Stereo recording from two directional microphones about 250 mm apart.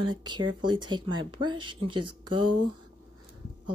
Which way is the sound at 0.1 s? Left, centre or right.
Centre.